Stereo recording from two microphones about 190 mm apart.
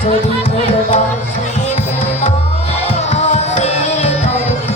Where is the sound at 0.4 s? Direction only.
30° left (ahead or behind).